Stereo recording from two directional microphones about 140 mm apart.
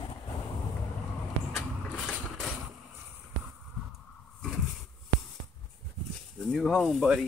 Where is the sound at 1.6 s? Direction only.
Centre (ahead or behind).